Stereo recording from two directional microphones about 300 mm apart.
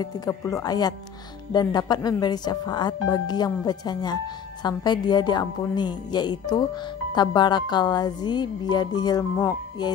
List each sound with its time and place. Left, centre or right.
0.0 s speech: centre